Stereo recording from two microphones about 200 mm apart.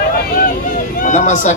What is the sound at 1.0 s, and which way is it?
Speech, 40° left (ahead or behind).